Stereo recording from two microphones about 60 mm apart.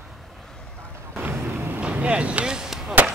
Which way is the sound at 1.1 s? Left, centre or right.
Right.